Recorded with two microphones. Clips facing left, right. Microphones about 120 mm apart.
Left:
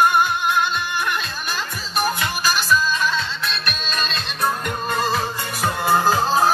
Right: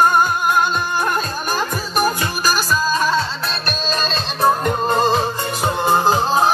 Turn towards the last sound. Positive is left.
turn(degrees=-20)  # may be behind; listen again after turning